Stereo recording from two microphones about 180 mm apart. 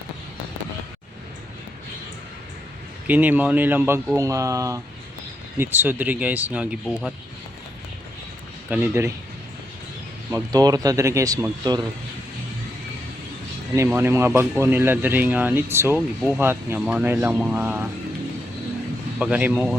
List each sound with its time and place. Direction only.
3.1 s speech: 10° right (ahead or behind)
8.7 s speech: 15° right (ahead or behind)
10.3 s speech: 20° right (ahead or behind)
13.7 s speech: 15° right (ahead or behind)
19.2 s speech: 10° right (ahead or behind)